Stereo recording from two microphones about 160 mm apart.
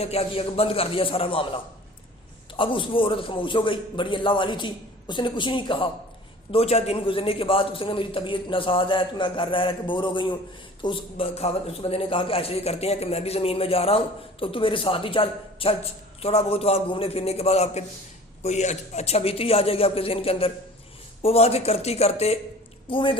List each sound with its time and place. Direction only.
0.0 s a man's voice: 40° left (ahead or behind)